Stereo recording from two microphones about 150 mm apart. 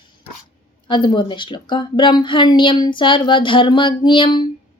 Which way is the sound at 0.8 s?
30° left (ahead or behind).